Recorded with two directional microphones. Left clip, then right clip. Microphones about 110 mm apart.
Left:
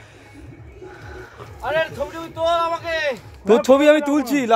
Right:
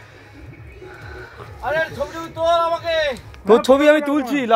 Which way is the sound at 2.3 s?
60° right (ahead or behind).